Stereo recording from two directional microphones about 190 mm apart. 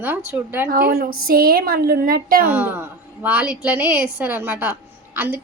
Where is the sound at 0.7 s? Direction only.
55° right (ahead or behind).